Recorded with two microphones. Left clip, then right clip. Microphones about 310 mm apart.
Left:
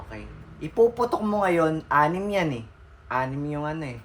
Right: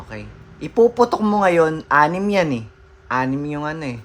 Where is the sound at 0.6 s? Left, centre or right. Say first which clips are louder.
Right 6 dB; right.